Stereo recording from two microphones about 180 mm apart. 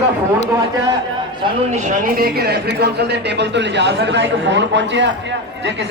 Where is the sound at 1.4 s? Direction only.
40° right (ahead or behind).